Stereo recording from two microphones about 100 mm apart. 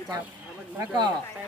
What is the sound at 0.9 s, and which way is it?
Speech, 45° right (ahead or behind).